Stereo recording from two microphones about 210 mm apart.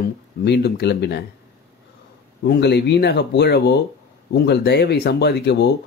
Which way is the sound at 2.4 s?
50° left (ahead or behind).